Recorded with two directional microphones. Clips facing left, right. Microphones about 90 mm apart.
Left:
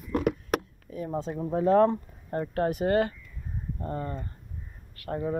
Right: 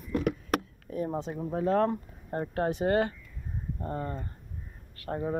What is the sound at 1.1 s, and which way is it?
Speech, 10° right (ahead or behind).